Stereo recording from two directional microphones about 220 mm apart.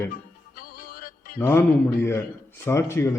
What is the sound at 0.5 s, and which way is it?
Music, 40° left (ahead or behind).